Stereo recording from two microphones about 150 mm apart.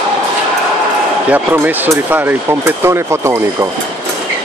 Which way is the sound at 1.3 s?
10° right (ahead or behind).